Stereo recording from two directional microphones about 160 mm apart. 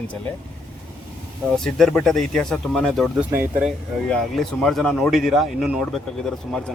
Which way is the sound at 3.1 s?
10° right (ahead or behind).